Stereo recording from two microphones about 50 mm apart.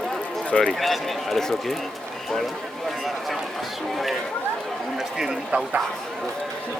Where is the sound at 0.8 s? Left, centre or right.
Centre.